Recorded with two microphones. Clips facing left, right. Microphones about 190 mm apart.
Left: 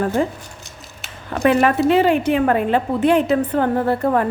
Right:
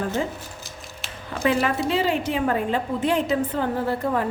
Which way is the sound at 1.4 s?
60° left (ahead or behind).